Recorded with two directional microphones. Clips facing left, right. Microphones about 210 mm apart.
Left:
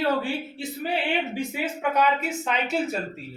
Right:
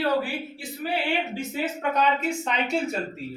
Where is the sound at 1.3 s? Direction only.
10° left (ahead or behind).